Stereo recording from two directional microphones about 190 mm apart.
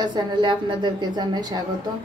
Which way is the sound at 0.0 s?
25° right (ahead or behind).